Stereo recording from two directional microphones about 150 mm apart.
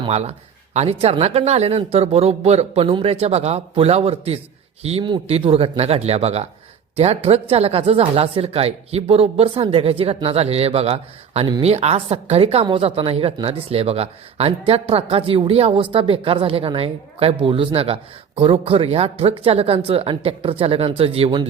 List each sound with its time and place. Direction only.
0.1 s speech: 45° right (ahead or behind)